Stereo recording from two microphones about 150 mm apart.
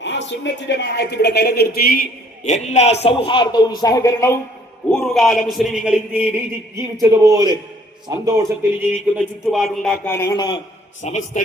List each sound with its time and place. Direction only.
0.9 s a man's voice: 90° left; by 4.4 s 20° left (ahead or behind)
4.9 s a man's voice: 5° left (ahead or behind); by 9.2 s 15° right (ahead or behind)
9.5 s a man's voice: centre (ahead or behind)
10.1 s a man's voice: 15° left (ahead or behind)
10.3 s a man's voice: 30° left (ahead or behind)
11.0 s a man's voice: 50° left (ahead or behind)